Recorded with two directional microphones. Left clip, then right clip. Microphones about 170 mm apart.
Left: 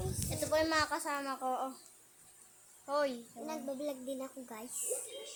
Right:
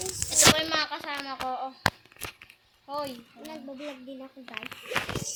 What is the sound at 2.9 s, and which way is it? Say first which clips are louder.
Speech: even; 35° left (ahead or behind).